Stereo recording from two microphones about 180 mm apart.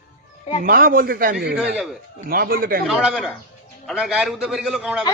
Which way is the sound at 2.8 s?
Centre (ahead or behind).